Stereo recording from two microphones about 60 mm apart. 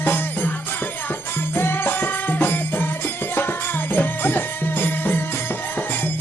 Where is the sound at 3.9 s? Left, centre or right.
Left.